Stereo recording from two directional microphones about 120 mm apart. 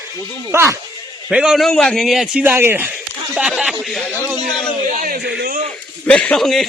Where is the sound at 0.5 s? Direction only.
20° right (ahead or behind).